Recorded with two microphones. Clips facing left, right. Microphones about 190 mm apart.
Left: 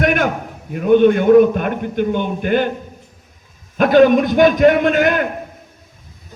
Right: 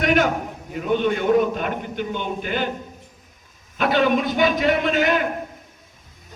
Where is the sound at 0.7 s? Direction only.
55° left (ahead or behind).